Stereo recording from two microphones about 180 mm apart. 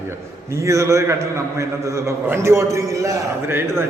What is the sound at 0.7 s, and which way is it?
A man's voice, 15° right (ahead or behind).